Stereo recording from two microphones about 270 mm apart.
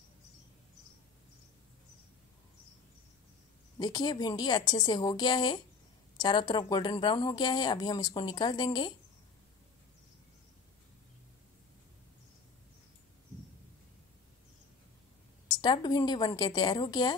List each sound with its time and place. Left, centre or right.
3.7 s speech: centre
15.6 s speech: centre